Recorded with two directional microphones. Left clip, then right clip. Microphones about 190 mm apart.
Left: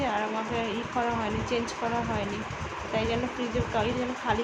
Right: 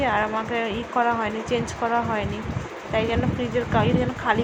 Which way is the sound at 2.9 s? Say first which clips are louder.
Right 5 dB; 20° right (ahead or behind).